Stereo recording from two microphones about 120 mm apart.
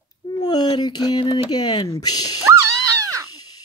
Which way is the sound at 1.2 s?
50° left (ahead or behind).